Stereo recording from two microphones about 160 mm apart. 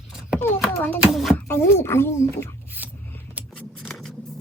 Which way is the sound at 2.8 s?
10° right (ahead or behind).